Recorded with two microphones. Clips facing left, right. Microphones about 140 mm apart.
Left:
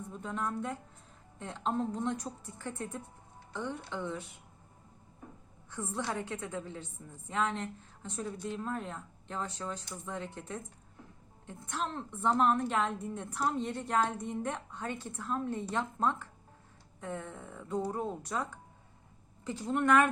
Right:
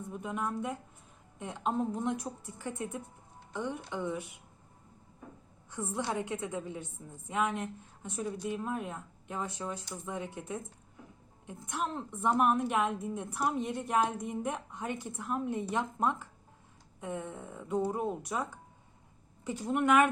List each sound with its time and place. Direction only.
0.1 s a woman's voice: 15° right (ahead or behind)
5.7 s a woman's voice: 15° right (ahead or behind)
19.7 s a woman's voice: 15° right (ahead or behind)